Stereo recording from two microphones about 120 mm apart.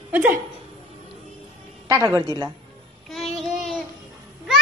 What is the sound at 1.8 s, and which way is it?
Speech, 25° right (ahead or behind).